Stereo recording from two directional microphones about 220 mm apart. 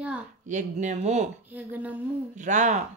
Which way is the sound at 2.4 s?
35° right (ahead or behind).